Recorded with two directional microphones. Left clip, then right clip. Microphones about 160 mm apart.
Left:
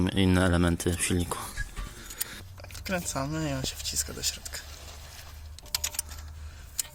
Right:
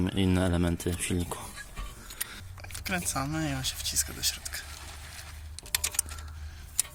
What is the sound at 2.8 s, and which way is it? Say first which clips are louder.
Speech: even; 55° left (ahead or behind).